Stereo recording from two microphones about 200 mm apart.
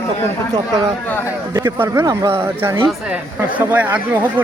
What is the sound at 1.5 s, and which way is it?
Speech, 15° right (ahead or behind).